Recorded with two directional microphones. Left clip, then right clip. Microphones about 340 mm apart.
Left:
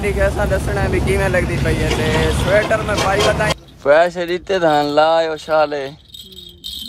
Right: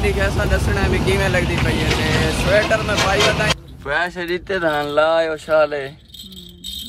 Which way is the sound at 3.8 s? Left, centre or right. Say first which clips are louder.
Left 11 dB; centre.